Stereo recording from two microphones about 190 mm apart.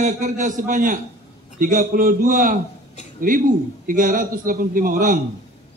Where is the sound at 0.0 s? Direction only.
45° right (ahead or behind).